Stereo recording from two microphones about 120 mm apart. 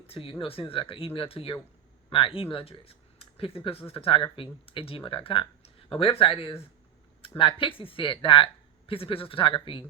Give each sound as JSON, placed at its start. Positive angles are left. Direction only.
{"t": 0.1, "sound": "speech", "side_deg": 50}